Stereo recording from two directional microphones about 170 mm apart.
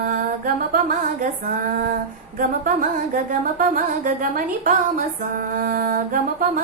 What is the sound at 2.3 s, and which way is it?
Music, 55° right (ahead or behind).